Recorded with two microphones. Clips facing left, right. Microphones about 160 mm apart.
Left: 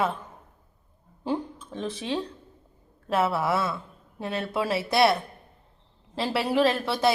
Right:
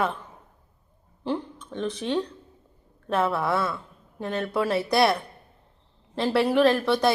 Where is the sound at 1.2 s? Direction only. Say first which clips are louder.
Even; 10° left (ahead or behind).